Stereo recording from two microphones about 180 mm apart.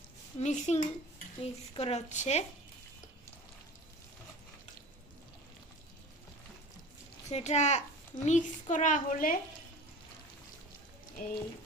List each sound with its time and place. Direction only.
0.3 s speech: 40° left (ahead or behind)
7.3 s speech: 40° left (ahead or behind)
11.2 s speech: 50° left (ahead or behind)